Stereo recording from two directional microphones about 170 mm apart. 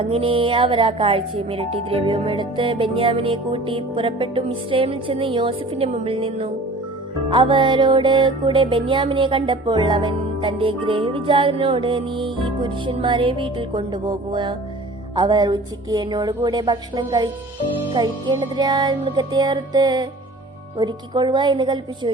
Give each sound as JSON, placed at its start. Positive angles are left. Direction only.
{"t": 0.0, "sound": "speech", "side_deg": -30}
{"t": 7.3, "sound": "music", "side_deg": -30}